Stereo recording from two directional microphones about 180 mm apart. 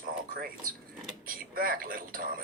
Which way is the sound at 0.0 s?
50° right (ahead or behind).